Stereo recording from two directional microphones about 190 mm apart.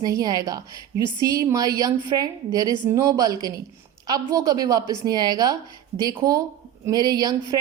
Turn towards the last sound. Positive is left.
turn(degrees=-20)  # may be behind; listen again after turning